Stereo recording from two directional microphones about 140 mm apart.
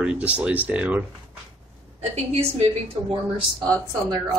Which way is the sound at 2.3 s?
45° right (ahead or behind).